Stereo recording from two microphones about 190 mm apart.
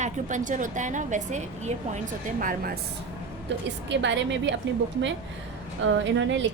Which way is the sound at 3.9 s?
70° right (ahead or behind).